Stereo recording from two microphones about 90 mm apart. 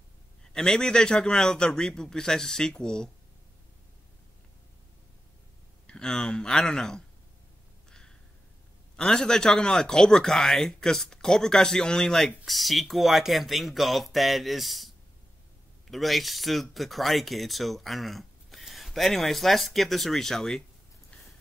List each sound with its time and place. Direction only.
0.4 s speech: 10° left (ahead or behind)
5.9 s speech: 10° left (ahead or behind)
8.9 s speech: 5° left (ahead or behind)
15.9 s speech: centre (ahead or behind)